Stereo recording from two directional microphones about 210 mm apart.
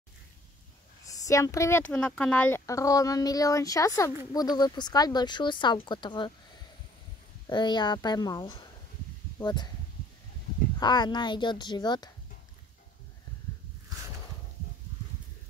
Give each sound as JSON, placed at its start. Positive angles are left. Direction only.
{"t": 1.0, "sound": "speech", "side_deg": 15}
{"t": 7.4, "sound": "speech", "side_deg": 20}
{"t": 10.8, "sound": "speech", "side_deg": 20}